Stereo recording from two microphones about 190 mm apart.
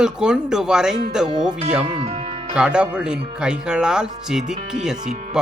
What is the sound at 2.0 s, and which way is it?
Speech, 30° right (ahead or behind).